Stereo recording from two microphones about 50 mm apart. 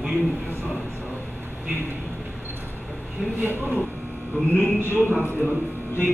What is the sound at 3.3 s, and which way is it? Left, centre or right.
Speech, right.